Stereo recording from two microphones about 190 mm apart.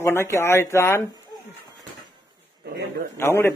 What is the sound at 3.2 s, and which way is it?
Speech, 10° left (ahead or behind).